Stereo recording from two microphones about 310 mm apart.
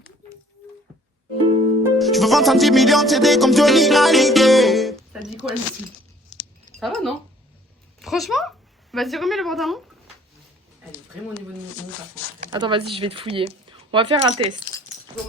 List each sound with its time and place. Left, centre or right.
1.8 s music: centre
5.4 s speech: centre
6.7 s speech: centre
12.5 s speech: centre